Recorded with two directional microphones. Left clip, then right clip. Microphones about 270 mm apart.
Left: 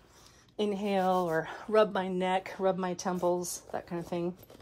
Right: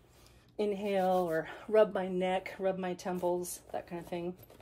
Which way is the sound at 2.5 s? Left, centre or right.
Left.